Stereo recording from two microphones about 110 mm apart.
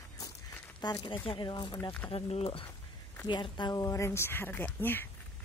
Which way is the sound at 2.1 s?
65° left (ahead or behind).